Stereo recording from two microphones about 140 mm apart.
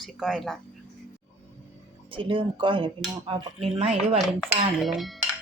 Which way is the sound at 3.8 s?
50° right (ahead or behind).